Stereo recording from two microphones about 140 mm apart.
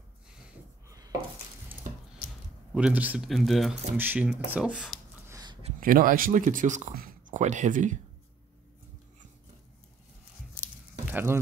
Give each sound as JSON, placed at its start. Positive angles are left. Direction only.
{"t": 0.8, "sound": "dishes", "side_deg": -25}
{"t": 2.7, "sound": "speech", "side_deg": -10}
{"t": 3.3, "sound": "speech", "side_deg": 0}
{"t": 3.9, "sound": "speech", "side_deg": -15}
{"t": 5.3, "sound": "a sound", "side_deg": -30}
{"t": 5.8, "sound": "speech", "side_deg": -85}
{"t": 11.1, "sound": "a sound", "side_deg": -15}